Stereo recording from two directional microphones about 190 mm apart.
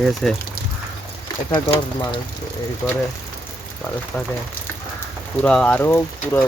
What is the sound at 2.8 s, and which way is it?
Speech, 5° left (ahead or behind).